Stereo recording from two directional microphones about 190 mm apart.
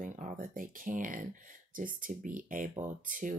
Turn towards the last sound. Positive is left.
turn(degrees=-45)  # may be behind; listen again after turning